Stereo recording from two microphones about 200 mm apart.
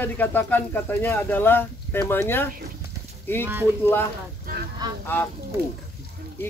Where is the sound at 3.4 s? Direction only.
10° right (ahead or behind).